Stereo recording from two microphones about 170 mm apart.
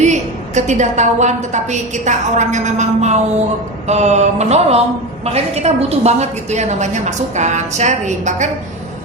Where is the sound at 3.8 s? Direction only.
40° right (ahead or behind).